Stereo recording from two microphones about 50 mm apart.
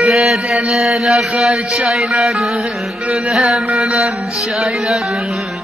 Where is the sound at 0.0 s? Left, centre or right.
Centre.